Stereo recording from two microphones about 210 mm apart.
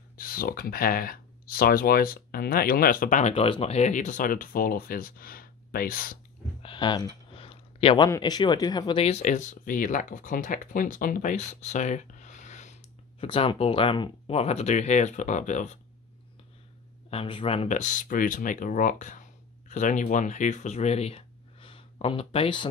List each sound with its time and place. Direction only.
0.2 s speech: 45° left (ahead or behind)
6.6 s a sound: 20° left (ahead or behind)
7.3 s speech: 25° left (ahead or behind)
17.1 s speech: 25° left (ahead or behind)